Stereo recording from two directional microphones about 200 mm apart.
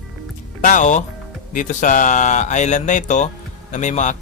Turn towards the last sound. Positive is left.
turn(degrees=40)  # may be behind; listen again after turning